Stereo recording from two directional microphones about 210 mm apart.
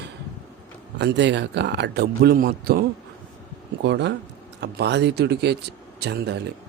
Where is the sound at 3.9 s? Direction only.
55° right (ahead or behind).